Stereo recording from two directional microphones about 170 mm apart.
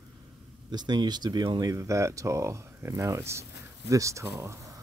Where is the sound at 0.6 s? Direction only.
25° right (ahead or behind).